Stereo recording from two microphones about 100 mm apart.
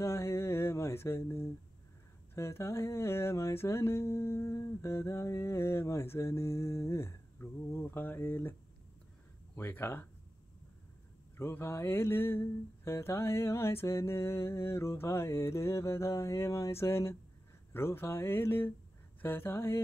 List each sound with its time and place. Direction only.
0.0 s a sound: 30° left (ahead or behind)
2.3 s music: 30° left (ahead or behind)
9.6 s music: 25° left (ahead or behind)
11.3 s music: 25° left (ahead or behind)